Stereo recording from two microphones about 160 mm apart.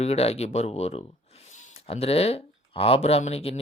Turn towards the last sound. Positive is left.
turn(degrees=40)  # may be behind; listen again after turning